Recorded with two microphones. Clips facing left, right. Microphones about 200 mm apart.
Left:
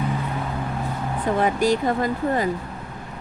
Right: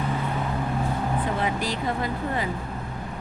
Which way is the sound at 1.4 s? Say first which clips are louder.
Left 7 dB; 45° left (ahead or behind).